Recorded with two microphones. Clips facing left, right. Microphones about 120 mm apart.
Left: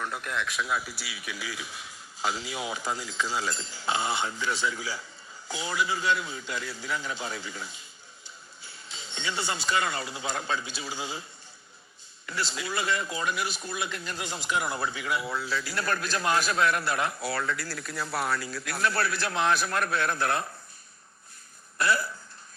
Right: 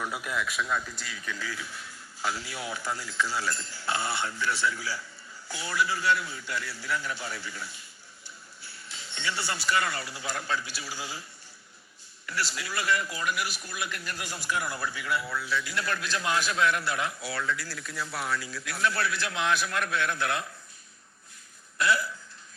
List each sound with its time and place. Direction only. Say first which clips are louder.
0.0 s a man's voice: even; 5° right (ahead or behind); by 15.4 s 20° left (ahead or behind)
15.4 s a man's voice: left 1 dB; 35° left (ahead or behind)
21.8 s a man's voice: even; 40° left (ahead or behind)